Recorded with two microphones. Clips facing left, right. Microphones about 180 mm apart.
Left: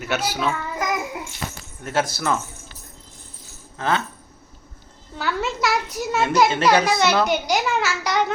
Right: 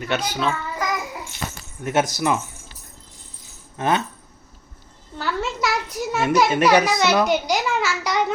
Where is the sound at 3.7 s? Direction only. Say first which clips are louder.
Right 2 dB; 20° right (ahead or behind).